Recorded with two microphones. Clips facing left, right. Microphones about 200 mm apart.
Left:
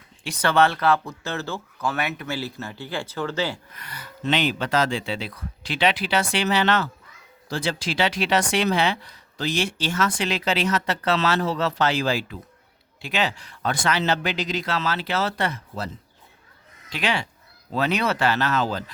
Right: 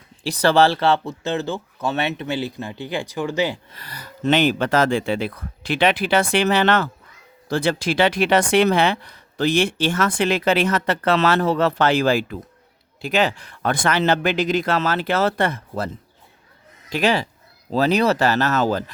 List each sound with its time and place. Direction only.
0.2 s speech: 35° right (ahead or behind); by 3.6 s 15° right (ahead or behind)
3.7 s speech: 35° right (ahead or behind); by 15.9 s 50° right (ahead or behind)
16.9 s speech: 40° right (ahead or behind)